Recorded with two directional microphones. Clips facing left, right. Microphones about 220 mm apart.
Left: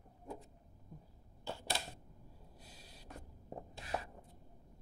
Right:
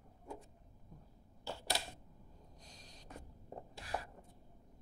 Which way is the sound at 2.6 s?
5° left (ahead or behind).